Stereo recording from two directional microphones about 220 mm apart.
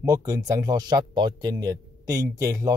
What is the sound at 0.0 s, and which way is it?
Speech, 15° right (ahead or behind).